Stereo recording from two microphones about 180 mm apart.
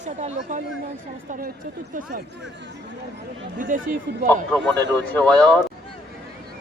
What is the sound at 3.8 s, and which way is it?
Speech, 45° right (ahead or behind).